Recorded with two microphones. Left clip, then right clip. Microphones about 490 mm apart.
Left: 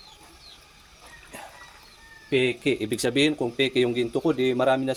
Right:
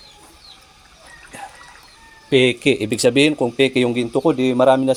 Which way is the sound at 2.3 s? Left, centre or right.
Left.